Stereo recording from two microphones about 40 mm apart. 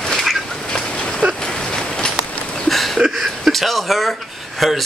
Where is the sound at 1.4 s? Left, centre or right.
Left.